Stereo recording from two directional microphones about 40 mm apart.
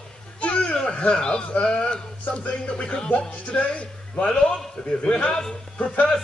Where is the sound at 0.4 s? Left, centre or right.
Left.